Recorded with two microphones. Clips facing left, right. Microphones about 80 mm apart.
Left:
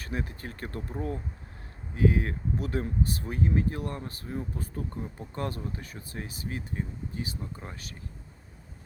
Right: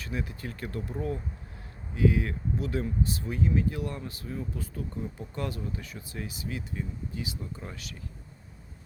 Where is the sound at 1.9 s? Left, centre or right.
Left.